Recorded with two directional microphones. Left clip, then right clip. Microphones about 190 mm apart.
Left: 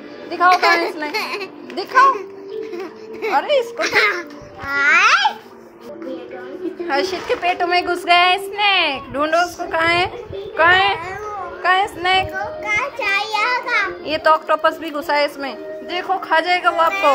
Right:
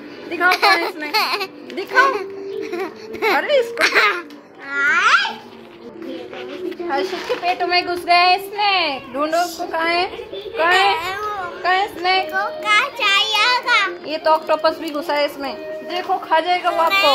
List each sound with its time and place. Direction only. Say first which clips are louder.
0.3 s a child's voice: left 1 dB; 15° right (ahead or behind)
3.3 s speech: left 2 dB; 15° right (ahead or behind)
3.7 s a child's voice: right 1 dB; 40° right (ahead or behind)
4.6 s speech: left 2 dB; 15° right (ahead or behind)
6.9 s a woman's voice: left 2 dB; 10° left (ahead or behind)
12.6 s a child's voice: right 3 dB; 25° right (ahead or behind)
14.0 s a woman's voice: left 2 dB; 5° left (ahead or behind)